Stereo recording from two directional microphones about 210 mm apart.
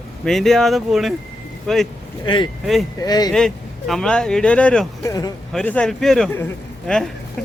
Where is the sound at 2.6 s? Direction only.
Centre (ahead or behind).